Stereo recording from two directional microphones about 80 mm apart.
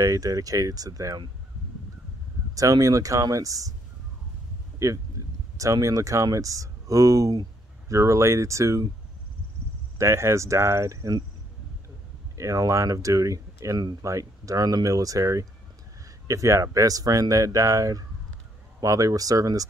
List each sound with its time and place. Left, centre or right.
0.0 s speech: right
2.5 s speech: right
4.7 s speech: right
9.9 s speech: right
12.4 s speech: right